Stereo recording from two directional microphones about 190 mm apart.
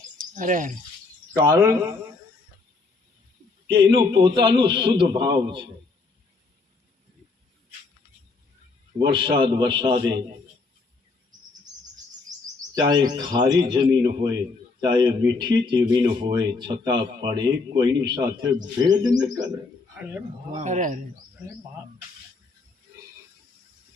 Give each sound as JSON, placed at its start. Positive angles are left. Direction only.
{"t": 0.2, "sound": "cricket", "side_deg": -45}
{"t": 1.4, "sound": "speech", "side_deg": -20}
{"t": 3.7, "sound": "speech", "side_deg": -25}
{"t": 9.0, "sound": "speech", "side_deg": -25}
{"t": 12.7, "sound": "speech", "side_deg": -20}
{"t": 20.6, "sound": "speech", "side_deg": -40}